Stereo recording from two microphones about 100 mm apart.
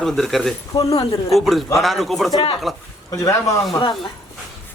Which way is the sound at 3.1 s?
35° left (ahead or behind).